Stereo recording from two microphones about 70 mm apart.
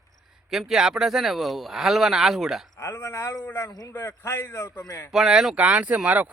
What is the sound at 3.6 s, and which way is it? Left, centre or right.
Speech, left.